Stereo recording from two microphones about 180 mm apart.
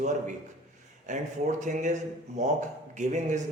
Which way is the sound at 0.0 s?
40° right (ahead or behind).